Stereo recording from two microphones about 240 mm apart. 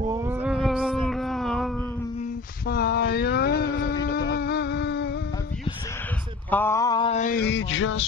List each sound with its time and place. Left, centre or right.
0.1 s cat: centre
2.6 s mantra: left
4.0 s music: left
6.5 s male singing: centre; by 8.1 s left